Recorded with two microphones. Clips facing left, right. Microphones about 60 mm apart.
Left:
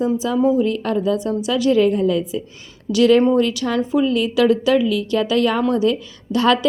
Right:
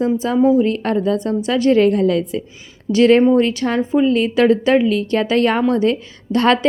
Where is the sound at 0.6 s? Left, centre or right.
Right.